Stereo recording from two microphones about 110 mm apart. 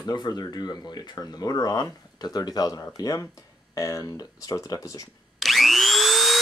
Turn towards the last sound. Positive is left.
turn(degrees=0)  # may be behind; listen again after turning